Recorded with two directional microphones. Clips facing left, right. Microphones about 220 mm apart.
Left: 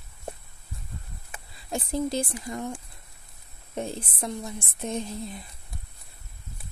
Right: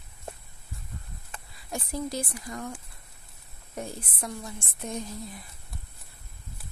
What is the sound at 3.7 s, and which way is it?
Speech, 25° left (ahead or behind).